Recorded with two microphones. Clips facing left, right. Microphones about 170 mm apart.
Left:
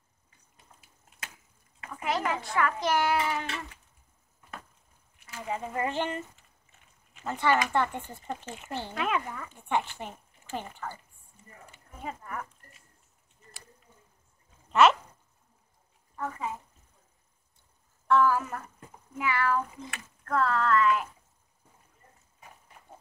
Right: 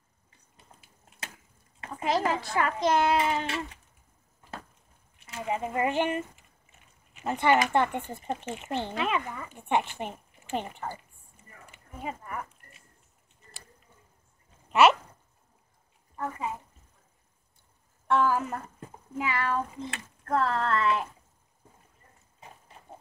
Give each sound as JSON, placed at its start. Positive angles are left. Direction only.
{"t": 1.8, "sound": "a child's voice", "side_deg": -30}
{"t": 5.2, "sound": "a child's voice", "side_deg": -20}
{"t": 8.9, "sound": "speech", "side_deg": 0}
{"t": 9.5, "sound": "a child's voice", "side_deg": -20}
{"t": 11.7, "sound": "a sound", "side_deg": -10}
{"t": 14.7, "sound": "a sound", "side_deg": -10}
{"t": 18.0, "sound": "speech", "side_deg": -20}